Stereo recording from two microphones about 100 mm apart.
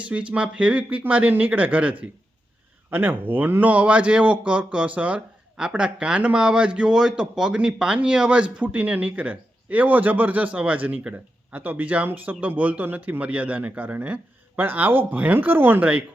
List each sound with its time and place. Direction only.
0.1 s speech: 10° right (ahead or behind)